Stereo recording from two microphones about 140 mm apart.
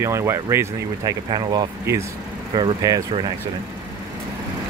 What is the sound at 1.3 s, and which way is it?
Speech, 35° right (ahead or behind).